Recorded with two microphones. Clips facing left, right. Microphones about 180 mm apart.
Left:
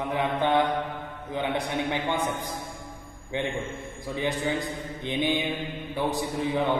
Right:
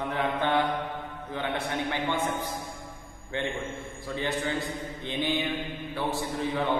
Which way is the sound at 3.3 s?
15° left (ahead or behind).